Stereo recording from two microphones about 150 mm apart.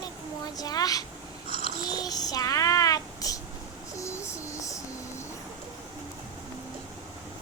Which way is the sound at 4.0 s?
20° left (ahead or behind).